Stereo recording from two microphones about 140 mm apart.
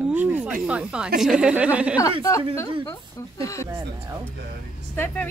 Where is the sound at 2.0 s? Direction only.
20° left (ahead or behind).